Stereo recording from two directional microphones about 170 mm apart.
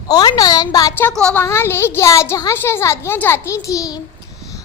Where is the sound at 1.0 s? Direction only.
5° left (ahead or behind).